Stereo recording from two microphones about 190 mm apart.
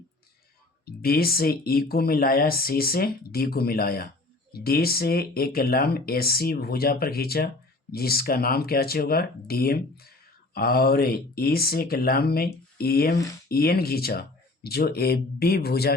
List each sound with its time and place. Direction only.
0.9 s speech: 50° left (ahead or behind)